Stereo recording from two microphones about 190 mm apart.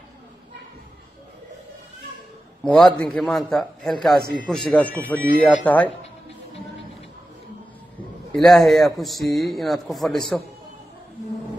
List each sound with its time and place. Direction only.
2.6 s a man's voice: 5° left (ahead or behind)
8.3 s a man's voice: centre (ahead or behind)